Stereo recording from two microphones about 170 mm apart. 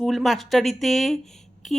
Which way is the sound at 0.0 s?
Centre (ahead or behind).